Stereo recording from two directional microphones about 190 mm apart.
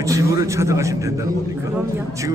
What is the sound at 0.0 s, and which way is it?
A man's voice, 15° right (ahead or behind).